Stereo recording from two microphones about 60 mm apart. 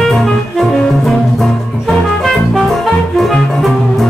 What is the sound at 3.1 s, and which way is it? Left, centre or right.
Music, centre.